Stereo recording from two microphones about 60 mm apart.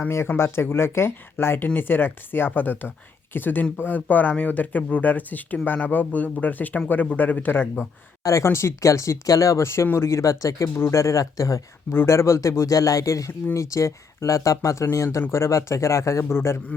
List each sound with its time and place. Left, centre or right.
0.3 s speech: left
8.2 s speech: left
8.4 s speech: left
10.8 s speech: left
11.9 s speech: left
12.1 s speech: left
16.3 s speech: left